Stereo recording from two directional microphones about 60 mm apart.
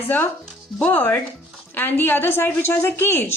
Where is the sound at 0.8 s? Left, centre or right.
Left.